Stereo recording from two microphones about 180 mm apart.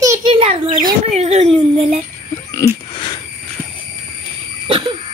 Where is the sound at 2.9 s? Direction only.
25° left (ahead or behind).